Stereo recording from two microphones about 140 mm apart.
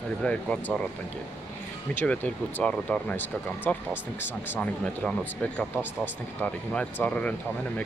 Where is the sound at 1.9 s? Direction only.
10° left (ahead or behind).